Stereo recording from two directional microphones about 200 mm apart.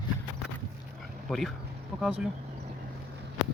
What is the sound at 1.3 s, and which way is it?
Speech, centre (ahead or behind).